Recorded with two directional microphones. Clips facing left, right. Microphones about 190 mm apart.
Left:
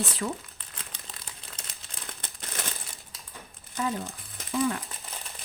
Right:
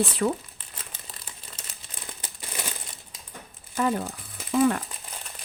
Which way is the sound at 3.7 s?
60° right (ahead or behind).